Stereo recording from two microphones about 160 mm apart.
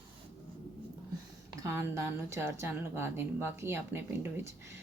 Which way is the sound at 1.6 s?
15° right (ahead or behind).